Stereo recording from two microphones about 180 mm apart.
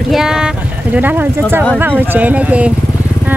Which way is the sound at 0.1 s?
5° right (ahead or behind).